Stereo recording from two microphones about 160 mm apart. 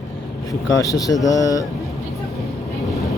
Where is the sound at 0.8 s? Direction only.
20° left (ahead or behind).